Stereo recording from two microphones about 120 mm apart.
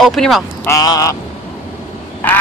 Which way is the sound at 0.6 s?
30° left (ahead or behind).